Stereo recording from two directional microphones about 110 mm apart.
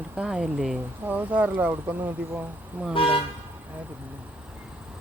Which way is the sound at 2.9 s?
50° left (ahead or behind).